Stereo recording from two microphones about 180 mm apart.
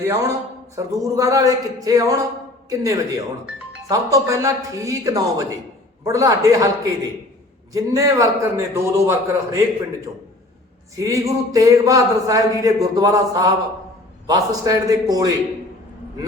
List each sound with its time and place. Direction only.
0.0 s a man's voice: 15° right (ahead or behind)
10.9 s speech: 15° right (ahead or behind)